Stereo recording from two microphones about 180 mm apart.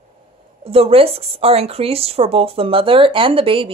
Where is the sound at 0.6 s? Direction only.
35° right (ahead or behind).